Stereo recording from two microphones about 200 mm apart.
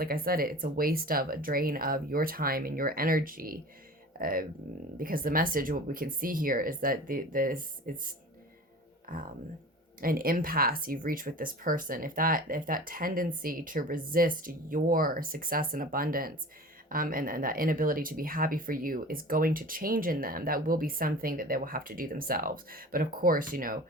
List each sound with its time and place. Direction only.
0.0 s speech: 45° right (ahead or behind)
9.1 s speech: 45° right (ahead or behind)